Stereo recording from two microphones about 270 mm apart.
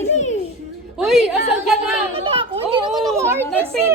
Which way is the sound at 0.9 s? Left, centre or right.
Centre.